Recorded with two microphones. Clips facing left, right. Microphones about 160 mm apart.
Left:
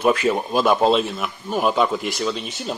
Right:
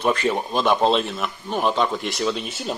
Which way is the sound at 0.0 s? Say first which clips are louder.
Left 3 dB; 5° left (ahead or behind).